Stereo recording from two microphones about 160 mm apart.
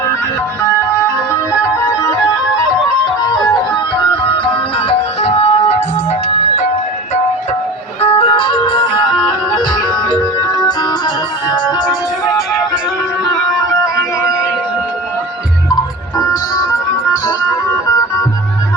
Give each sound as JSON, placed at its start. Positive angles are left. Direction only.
{"t": 3.9, "sound": "music", "side_deg": 30}
{"t": 8.0, "sound": "music", "side_deg": 35}
{"t": 16.1, "sound": "music", "side_deg": 20}